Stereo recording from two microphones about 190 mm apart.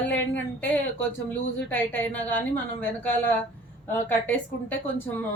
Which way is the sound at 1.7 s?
10° left (ahead or behind).